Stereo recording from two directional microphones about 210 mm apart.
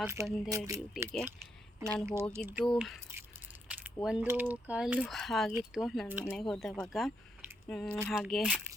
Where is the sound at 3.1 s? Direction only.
10° right (ahead or behind).